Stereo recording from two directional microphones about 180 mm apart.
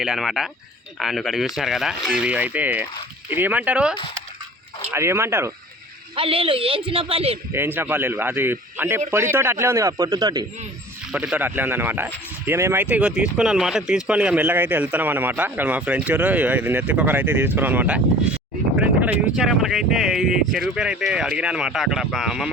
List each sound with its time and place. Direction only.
0.0 s speech: centre (ahead or behind)
6.1 s a man's voice: 30° right (ahead or behind)
7.5 s speech: 10° right (ahead or behind)
11.1 s speech: 5° right (ahead or behind)
19.4 s speech: centre (ahead or behind)